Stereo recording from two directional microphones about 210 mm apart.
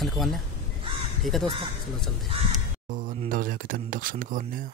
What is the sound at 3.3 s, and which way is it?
Speech, 40° right (ahead or behind).